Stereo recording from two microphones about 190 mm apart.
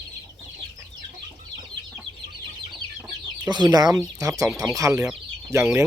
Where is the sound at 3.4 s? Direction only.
20° right (ahead or behind).